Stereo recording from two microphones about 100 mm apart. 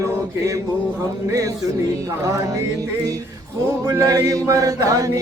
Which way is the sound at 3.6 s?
30° right (ahead or behind).